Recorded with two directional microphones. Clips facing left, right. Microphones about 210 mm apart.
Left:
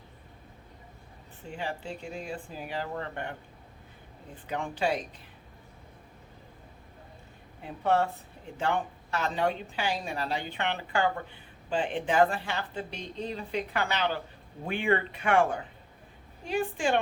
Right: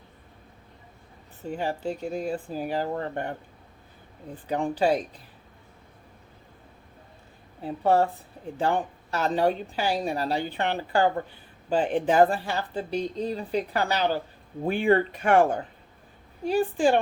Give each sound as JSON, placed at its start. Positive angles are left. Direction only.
{"t": 1.5, "sound": "speech", "side_deg": -40}
{"t": 4.4, "sound": "speech", "side_deg": -35}
{"t": 7.6, "sound": "speech", "side_deg": -35}